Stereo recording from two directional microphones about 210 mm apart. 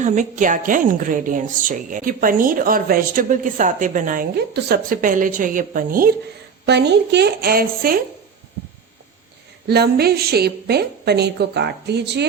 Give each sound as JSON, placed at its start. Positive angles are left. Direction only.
{"t": 0.0, "sound": "a woman's voice", "side_deg": -35}
{"t": 6.7, "sound": "a woman's voice", "side_deg": -55}
{"t": 9.6, "sound": "a woman's voice", "side_deg": -50}